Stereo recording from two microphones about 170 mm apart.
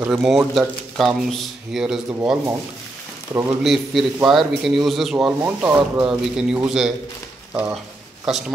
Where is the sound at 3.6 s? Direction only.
Centre (ahead or behind).